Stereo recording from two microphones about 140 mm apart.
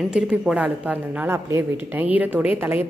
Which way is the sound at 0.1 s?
5° right (ahead or behind).